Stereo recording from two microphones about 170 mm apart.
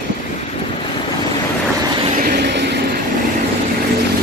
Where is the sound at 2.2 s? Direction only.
75° right (ahead or behind).